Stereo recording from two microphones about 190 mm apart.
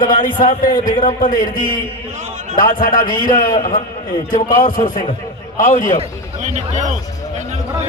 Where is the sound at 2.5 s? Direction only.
45° left (ahead or behind).